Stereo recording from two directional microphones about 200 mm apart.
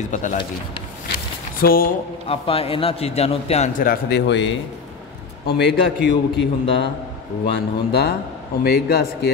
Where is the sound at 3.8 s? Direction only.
55° left (ahead or behind).